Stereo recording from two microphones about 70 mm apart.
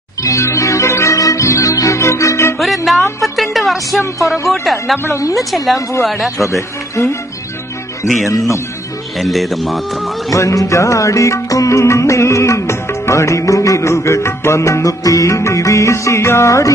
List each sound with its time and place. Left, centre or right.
0.2 s music: left
2.6 s music: centre
4.5 s speech: centre
4.9 s a woman's voice: left
5.3 s speech: centre
6.5 s speech: left
9.2 s speech: centre
10.3 s music: left